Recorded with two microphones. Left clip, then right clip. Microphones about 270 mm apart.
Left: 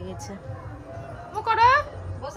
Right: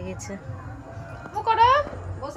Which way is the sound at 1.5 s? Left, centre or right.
Centre.